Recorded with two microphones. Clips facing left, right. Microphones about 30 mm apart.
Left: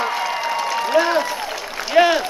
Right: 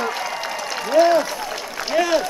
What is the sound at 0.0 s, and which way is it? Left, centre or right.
Applause, centre.